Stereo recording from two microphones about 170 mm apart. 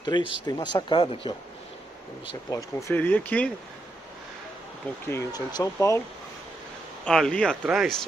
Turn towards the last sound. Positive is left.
turn(degrees=0)  # may be behind; listen again after turning